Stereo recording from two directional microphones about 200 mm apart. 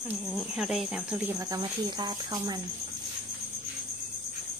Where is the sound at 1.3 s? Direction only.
20° right (ahead or behind).